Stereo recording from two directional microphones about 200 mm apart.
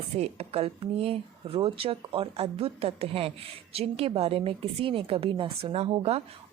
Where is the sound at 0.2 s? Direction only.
30° right (ahead or behind).